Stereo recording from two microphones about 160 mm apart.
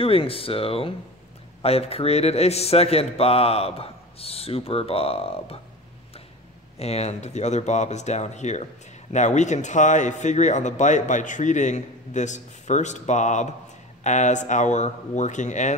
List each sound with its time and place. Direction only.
0.0 s a man's voice: 35° left (ahead or behind)
6.8 s speech: 40° left (ahead or behind)